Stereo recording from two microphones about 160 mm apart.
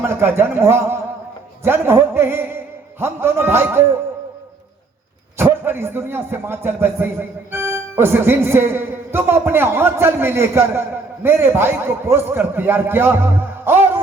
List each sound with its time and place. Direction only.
0.0 s speech: 15° right (ahead or behind)
5.4 s speech: 15° right (ahead or behind)